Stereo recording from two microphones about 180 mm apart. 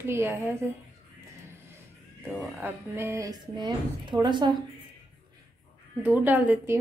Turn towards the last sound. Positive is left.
turn(degrees=-10)  # may be behind; listen again after turning